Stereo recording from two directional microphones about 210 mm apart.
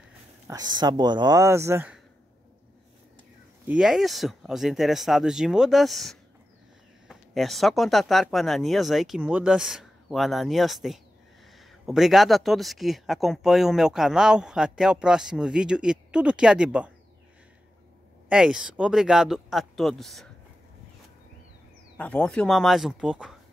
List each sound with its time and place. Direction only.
0.5 s speech: 20° right (ahead or behind)
3.6 s speech: 5° right (ahead or behind)
18.3 s speech: 5° right (ahead or behind)
21.9 s speech: 5° left (ahead or behind)